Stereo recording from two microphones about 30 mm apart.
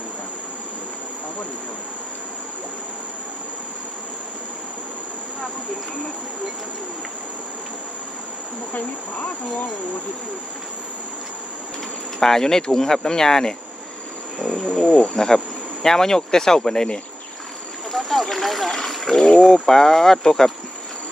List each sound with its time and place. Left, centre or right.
8.7 s speech: left
12.2 s speech: centre
14.3 s insect: left
14.8 s cricket: left
15.1 s speech: centre
17.9 s speech: centre
18.9 s a sound: centre
19.4 s speech: centre